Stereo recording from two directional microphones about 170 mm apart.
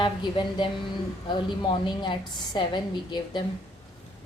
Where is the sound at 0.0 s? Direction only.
30° left (ahead or behind).